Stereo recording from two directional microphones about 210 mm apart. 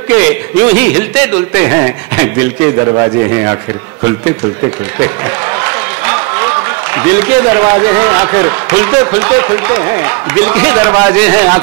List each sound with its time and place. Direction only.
0.1 s a man's voice: 10° right (ahead or behind)
7.0 s a man's voice: 10° right (ahead or behind)